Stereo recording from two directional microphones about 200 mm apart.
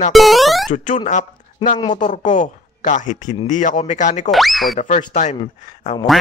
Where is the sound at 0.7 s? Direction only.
40° left (ahead or behind).